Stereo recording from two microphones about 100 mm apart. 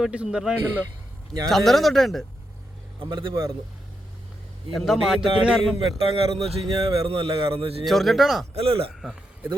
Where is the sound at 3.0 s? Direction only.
55° right (ahead or behind).